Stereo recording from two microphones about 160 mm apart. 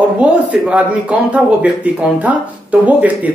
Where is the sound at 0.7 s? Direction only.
10° right (ahead or behind).